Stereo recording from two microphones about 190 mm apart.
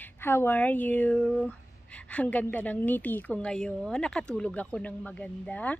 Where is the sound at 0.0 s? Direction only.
10° left (ahead or behind).